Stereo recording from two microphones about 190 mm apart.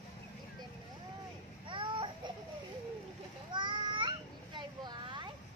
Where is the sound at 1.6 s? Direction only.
25° right (ahead or behind).